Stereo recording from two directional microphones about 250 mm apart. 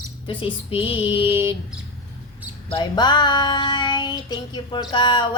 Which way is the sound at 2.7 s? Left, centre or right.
Centre.